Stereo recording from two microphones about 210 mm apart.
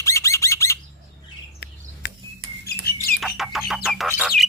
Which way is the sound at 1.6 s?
55° left (ahead or behind).